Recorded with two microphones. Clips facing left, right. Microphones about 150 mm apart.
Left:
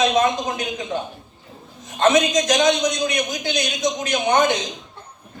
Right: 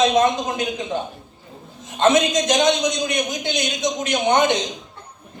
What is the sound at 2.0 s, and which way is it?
Speech, 25° right (ahead or behind).